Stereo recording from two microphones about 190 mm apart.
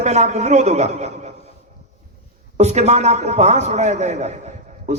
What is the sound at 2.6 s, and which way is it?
A man's voice, 35° right (ahead or behind).